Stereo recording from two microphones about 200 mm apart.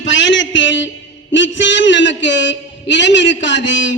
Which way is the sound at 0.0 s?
70° left (ahead or behind).